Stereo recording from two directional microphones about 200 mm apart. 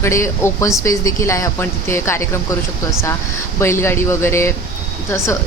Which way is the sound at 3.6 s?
15° left (ahead or behind).